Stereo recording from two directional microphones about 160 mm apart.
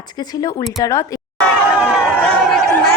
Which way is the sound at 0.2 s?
25° left (ahead or behind).